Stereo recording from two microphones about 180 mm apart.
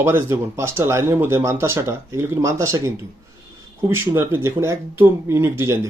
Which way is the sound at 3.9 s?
15° right (ahead or behind).